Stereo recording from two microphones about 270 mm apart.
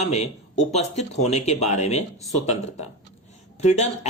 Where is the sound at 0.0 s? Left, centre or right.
Left.